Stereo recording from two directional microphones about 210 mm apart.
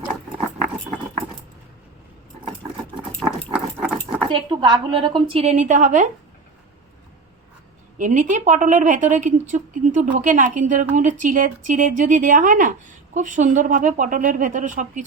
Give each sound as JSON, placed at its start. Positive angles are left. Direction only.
{"t": 3.2, "sound": "a sound", "side_deg": -5}
{"t": 4.3, "sound": "a woman's voice", "side_deg": -20}
{"t": 7.9, "sound": "a woman's voice", "side_deg": -35}